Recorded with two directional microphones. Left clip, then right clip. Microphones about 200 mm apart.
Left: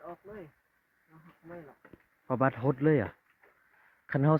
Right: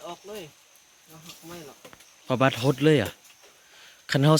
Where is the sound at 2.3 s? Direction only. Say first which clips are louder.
Right 6 dB; 10° right (ahead or behind).